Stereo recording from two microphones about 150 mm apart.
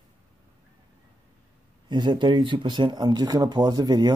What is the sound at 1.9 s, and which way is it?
Speech, 30° right (ahead or behind).